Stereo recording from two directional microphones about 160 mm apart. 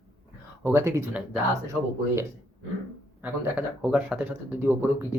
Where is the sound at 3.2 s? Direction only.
10° right (ahead or behind).